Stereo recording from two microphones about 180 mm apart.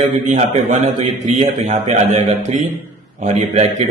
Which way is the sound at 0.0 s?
45° right (ahead or behind).